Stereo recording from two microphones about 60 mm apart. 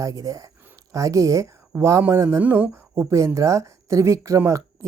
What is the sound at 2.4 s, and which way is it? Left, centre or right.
Speech, right.